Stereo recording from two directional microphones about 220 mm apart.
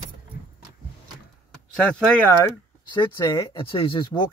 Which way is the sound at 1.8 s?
5° left (ahead or behind).